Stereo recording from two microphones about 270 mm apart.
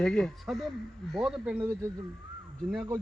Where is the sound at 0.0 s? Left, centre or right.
Centre.